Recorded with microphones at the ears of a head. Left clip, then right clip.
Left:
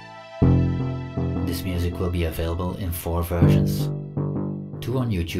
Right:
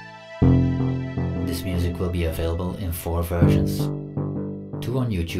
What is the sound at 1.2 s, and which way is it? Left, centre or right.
Speech, centre.